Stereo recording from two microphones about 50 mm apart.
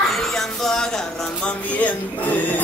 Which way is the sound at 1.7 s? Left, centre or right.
Left.